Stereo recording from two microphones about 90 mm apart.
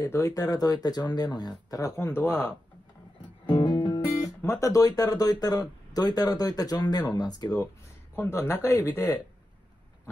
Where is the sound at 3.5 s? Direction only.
65° left (ahead or behind).